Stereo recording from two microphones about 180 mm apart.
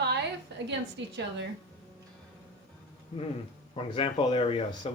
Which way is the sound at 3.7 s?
30° left (ahead or behind).